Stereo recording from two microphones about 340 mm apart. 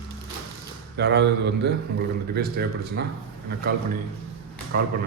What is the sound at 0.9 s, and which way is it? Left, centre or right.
A man's voice, right.